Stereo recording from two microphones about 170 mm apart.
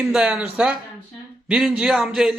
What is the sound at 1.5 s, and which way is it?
Speech, 5° right (ahead or behind).